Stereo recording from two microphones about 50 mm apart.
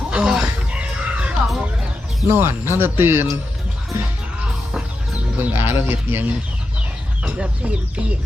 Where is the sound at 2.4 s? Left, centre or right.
Right.